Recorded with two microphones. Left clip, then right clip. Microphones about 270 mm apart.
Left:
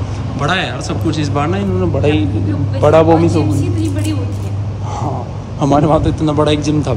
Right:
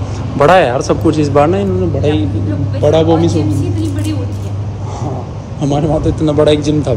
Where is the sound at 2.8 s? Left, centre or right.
Centre.